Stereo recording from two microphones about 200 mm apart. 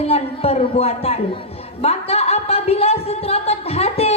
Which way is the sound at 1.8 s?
30° left (ahead or behind).